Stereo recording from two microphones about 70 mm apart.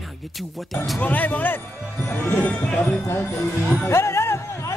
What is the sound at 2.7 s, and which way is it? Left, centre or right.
Speech, centre.